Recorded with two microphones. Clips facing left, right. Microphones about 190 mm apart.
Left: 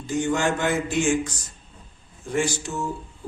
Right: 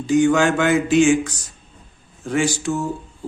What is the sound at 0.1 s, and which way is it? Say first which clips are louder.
A man's voice: right 8 dB; 90° right.